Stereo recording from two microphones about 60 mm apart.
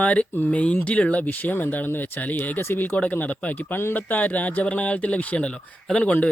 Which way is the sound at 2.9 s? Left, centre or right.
Left.